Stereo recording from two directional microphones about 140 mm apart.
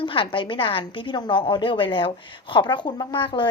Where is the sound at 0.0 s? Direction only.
40° left (ahead or behind).